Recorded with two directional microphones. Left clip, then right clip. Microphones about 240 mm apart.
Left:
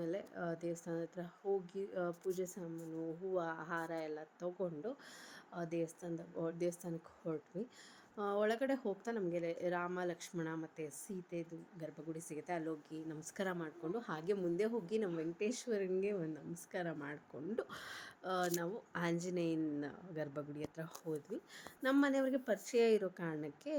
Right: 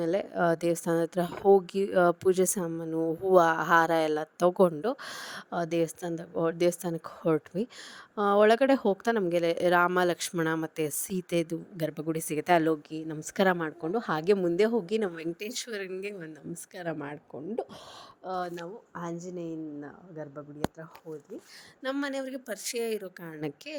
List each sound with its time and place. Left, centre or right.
0.0 s a woman's voice: right
18.5 s speech: centre
19.8 s speech: centre
21.8 s a woman's voice: right
22.8 s speech: centre